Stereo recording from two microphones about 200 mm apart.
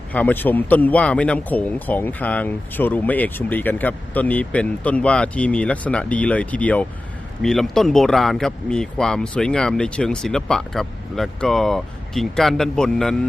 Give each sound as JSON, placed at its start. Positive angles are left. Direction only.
{"t": 0.1, "sound": "speech", "side_deg": 10}